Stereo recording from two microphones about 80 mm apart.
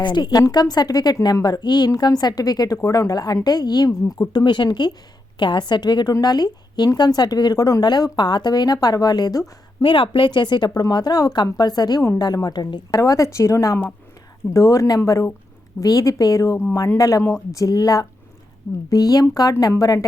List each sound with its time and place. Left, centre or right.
0.0 s a woman's voice: left
4.3 s a woman's voice: left
9.8 s a woman's voice: left
12.9 s speech: left